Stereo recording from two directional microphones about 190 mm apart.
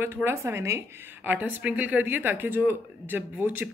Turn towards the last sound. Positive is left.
turn(degrees=-10)  # may be behind; listen again after turning